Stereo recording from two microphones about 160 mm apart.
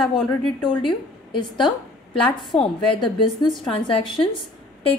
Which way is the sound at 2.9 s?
30° left (ahead or behind).